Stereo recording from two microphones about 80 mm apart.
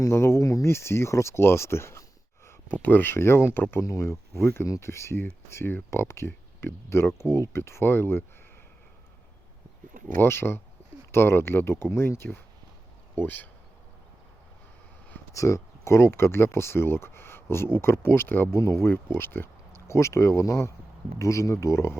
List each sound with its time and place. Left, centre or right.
0.0 s speech: left
10.2 s speech: left
15.3 s speech: left